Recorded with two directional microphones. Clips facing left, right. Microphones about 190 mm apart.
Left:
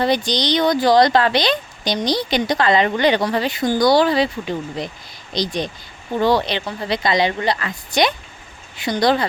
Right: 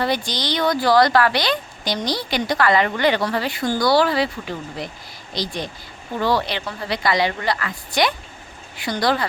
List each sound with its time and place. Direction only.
0.3 s speech: 20° left (ahead or behind)